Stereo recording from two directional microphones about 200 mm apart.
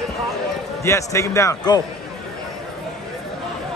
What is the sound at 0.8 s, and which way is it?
Speech, 15° left (ahead or behind).